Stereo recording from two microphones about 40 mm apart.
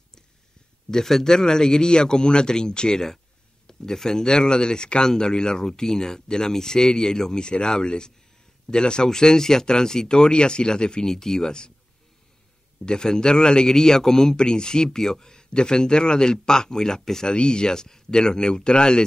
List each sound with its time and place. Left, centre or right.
0.8 s a man's voice: centre
12.8 s a man's voice: centre